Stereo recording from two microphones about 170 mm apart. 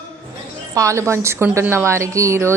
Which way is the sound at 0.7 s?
20° right (ahead or behind).